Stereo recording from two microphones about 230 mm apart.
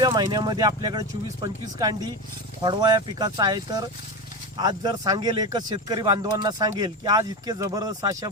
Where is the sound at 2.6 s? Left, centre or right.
Centre.